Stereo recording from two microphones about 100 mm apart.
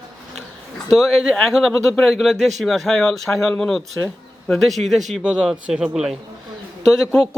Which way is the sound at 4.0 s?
15° left (ahead or behind).